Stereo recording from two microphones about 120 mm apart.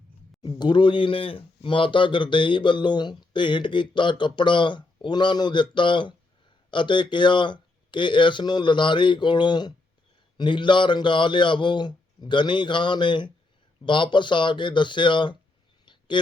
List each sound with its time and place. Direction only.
0.4 s speech: 40° left (ahead or behind)